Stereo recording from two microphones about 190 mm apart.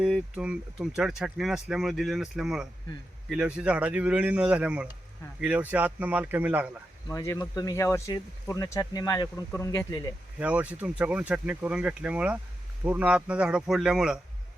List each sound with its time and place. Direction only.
0.0 s speech: 5° right (ahead or behind)
7.1 s speech: 15° left (ahead or behind)
10.4 s speech: 5° right (ahead or behind)